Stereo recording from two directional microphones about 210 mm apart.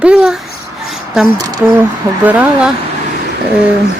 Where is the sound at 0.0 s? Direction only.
5° right (ahead or behind).